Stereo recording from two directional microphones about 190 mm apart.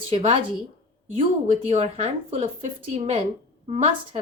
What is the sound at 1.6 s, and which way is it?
Speech, 35° right (ahead or behind).